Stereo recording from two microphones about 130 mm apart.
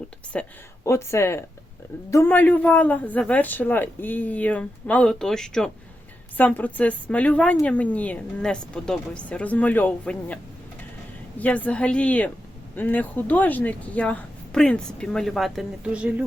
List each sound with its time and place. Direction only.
0.3 s speech: 10° left (ahead or behind)
0.9 s speech: 20° left (ahead or behind); by 16.2 s 10° right (ahead or behind)